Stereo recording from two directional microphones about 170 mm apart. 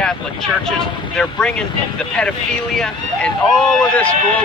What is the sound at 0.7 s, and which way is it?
Speech, 5° left (ahead or behind).